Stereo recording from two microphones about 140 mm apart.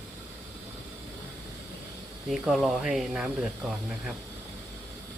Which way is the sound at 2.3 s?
Centre (ahead or behind).